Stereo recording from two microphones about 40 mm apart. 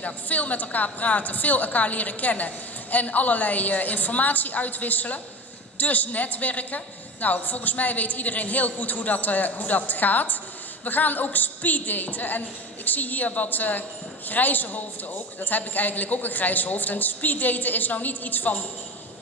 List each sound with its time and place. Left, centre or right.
0.0 s a woman's voice: left